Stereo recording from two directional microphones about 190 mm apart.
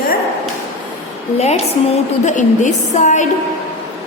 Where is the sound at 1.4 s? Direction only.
35° left (ahead or behind).